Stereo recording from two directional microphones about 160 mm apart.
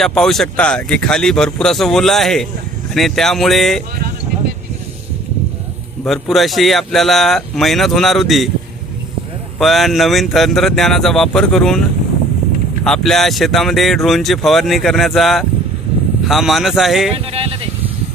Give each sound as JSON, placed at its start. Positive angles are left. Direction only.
{"t": 0.0, "sound": "speech", "side_deg": 5}
{"t": 6.1, "sound": "speech", "side_deg": 0}
{"t": 9.6, "sound": "speech", "side_deg": 0}
{"t": 12.8, "sound": "speech", "side_deg": 5}
{"t": 17.3, "sound": "speech", "side_deg": -35}